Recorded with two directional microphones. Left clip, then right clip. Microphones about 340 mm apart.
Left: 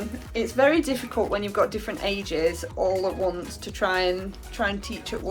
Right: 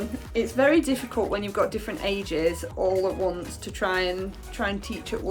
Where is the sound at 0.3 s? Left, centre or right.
Centre.